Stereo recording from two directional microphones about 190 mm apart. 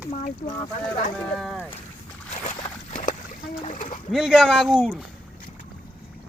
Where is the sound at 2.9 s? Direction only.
40° left (ahead or behind).